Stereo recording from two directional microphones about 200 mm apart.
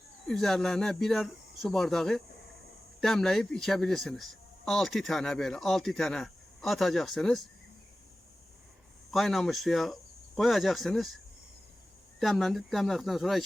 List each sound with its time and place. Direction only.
0.3 s speech: centre (ahead or behind)
9.1 s speech: centre (ahead or behind)
12.2 s speech: centre (ahead or behind)